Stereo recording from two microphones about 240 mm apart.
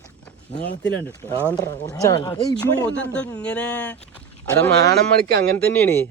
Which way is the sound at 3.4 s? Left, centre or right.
Centre.